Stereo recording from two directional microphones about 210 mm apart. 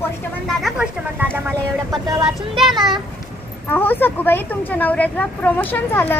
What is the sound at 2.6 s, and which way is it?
A child's voice, centre (ahead or behind).